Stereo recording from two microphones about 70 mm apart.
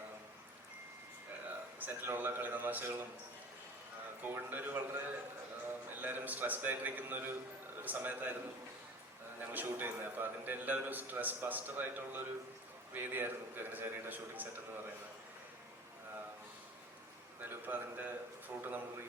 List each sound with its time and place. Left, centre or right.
1.5 s a sound: right
4.2 s a man's voice: right
6.0 s a man's voice: right
9.4 s a man's voice: right
17.4 s a man's voice: right